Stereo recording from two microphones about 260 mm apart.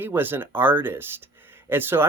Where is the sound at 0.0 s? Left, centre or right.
Centre.